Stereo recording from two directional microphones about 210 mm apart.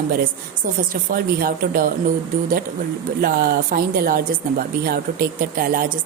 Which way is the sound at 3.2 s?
45° right (ahead or behind).